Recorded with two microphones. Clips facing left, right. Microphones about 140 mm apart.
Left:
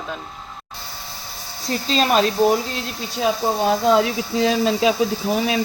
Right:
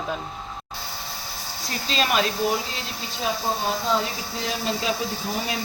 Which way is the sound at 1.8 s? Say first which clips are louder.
Left 5 dB; 35° left (ahead or behind).